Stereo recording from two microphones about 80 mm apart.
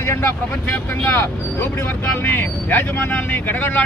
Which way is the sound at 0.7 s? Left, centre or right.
Left.